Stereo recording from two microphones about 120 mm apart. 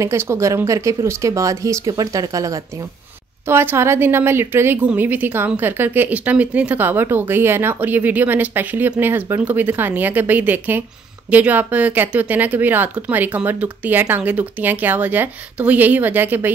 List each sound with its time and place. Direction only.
0.0 s a woman's voice: 25° right (ahead or behind)